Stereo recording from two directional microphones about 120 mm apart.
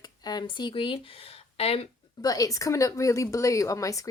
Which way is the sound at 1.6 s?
55° left (ahead or behind).